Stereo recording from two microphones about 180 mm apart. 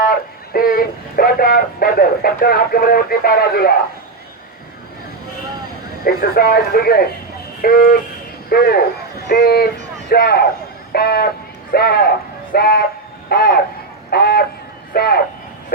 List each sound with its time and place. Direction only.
0.0 s speech: 55° left (ahead or behind)
6.1 s speech: 55° left (ahead or behind)